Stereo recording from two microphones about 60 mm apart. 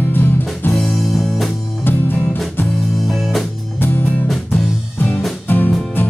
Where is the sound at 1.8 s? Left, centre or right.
Left.